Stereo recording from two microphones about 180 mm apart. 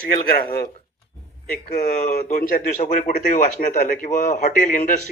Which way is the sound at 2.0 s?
45° left (ahead or behind).